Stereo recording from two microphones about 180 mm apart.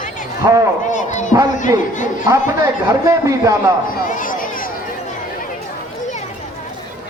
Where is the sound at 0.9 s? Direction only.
45° left (ahead or behind).